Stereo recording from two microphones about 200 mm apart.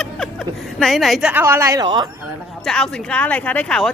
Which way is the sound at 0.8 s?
Centre (ahead or behind).